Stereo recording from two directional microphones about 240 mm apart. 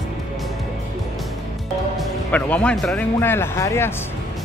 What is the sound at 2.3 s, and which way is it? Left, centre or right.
Speech, centre.